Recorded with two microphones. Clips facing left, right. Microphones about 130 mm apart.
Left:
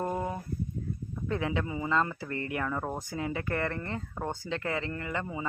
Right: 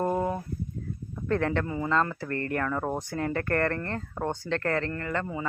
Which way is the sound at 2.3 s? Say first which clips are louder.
Right 4 dB; 50° right (ahead or behind).